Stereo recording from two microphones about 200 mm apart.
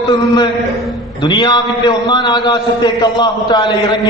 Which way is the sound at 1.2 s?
20° left (ahead or behind).